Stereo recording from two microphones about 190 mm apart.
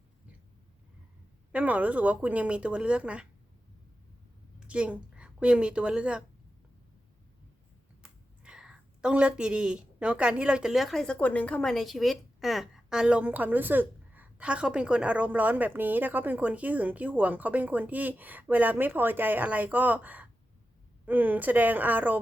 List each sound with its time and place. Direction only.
1.5 s speech: 5° right (ahead or behind)
4.6 s a woman's voice: 5° right (ahead or behind)
8.0 s speech: 5° right (ahead or behind)